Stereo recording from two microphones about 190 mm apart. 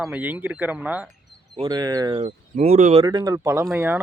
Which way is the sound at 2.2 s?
35° right (ahead or behind).